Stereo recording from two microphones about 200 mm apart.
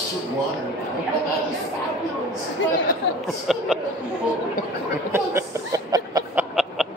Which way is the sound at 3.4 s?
Centre (ahead or behind).